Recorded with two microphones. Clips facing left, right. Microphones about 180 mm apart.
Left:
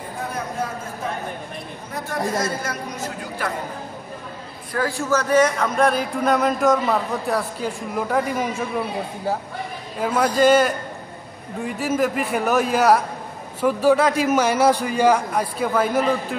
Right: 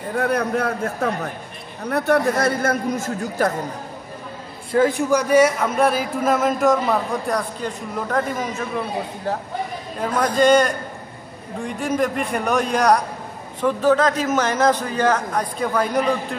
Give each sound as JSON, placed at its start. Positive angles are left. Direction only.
{"t": 0.1, "sound": "a man's voice", "side_deg": -70}
{"t": 4.7, "sound": "speech", "side_deg": -20}
{"t": 9.9, "sound": "a man's voice", "side_deg": 5}